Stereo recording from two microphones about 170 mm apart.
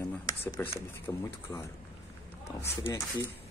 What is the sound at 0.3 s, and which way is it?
Speech, 15° left (ahead or behind).